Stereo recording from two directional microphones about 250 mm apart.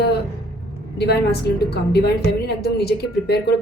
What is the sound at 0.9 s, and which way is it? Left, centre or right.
Speech, left.